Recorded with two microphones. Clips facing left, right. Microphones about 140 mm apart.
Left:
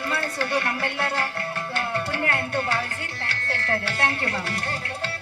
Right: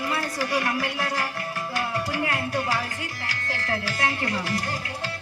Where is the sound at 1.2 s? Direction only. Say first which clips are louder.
Left 1 dB; 15° right (ahead or behind).